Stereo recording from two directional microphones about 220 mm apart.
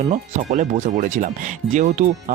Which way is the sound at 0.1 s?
35° right (ahead or behind).